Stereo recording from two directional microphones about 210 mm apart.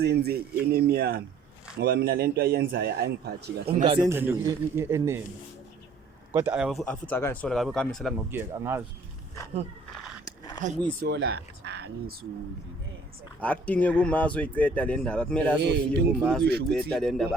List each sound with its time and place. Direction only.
0.0 s a man's voice: 50° right (ahead or behind)
3.8 s speech: 25° right (ahead or behind)
4.1 s a man's voice: 10° right (ahead or behind)
6.3 s speech: 10° right (ahead or behind)
8.3 s a man's voice: 10° right (ahead or behind)
10.6 s speech: 35° right (ahead or behind)
11.0 s speech: 50° right (ahead or behind)
13.4 s speech: 5° left (ahead or behind)
15.6 s a man's voice: 55° right (ahead or behind)
16.9 s speech: centre (ahead or behind)